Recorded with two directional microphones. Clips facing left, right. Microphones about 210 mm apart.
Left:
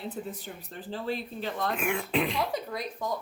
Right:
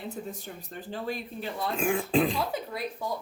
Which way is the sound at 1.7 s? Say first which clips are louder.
Right 6 dB; 30° right (ahead or behind).